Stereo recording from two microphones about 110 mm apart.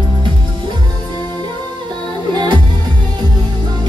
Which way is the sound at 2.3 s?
45° right (ahead or behind).